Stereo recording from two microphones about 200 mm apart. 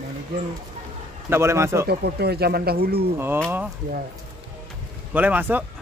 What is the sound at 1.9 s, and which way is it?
Speech, 55° right (ahead or behind).